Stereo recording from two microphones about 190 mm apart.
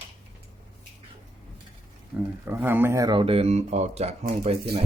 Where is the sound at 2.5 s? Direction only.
10° right (ahead or behind).